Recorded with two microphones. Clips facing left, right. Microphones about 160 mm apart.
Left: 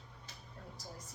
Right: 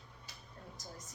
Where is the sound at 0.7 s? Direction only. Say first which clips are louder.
Even; 30° left (ahead or behind).